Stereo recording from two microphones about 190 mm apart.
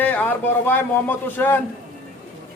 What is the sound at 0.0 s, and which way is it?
A man's voice, 10° left (ahead or behind).